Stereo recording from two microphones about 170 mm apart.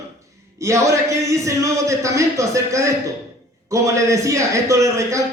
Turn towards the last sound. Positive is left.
turn(degrees=-15)  # may be behind; listen again after turning